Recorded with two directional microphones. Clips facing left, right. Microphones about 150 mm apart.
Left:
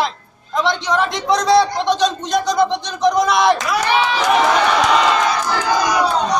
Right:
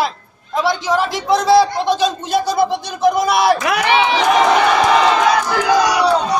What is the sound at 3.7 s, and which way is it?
Speech, 70° right (ahead or behind).